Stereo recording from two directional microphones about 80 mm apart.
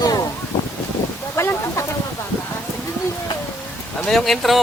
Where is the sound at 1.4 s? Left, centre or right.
Left.